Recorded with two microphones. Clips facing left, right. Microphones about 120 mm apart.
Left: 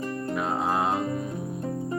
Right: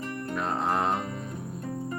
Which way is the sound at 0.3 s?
5° left (ahead or behind).